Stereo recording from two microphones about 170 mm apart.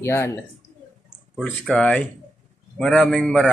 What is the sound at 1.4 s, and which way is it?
A man's voice, 5° left (ahead or behind).